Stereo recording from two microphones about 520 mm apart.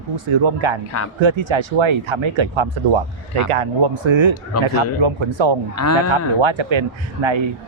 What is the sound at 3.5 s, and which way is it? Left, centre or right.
A man's voice, right.